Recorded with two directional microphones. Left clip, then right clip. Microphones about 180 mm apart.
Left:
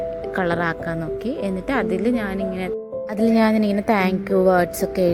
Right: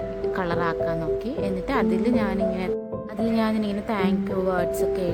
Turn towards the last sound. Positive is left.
turn(degrees=35)  # may be behind; listen again after turning